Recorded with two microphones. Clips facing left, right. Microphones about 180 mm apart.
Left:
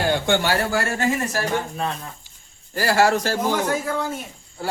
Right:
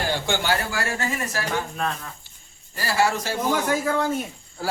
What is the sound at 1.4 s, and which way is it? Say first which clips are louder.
Speech: left 2 dB; 25° left (ahead or behind).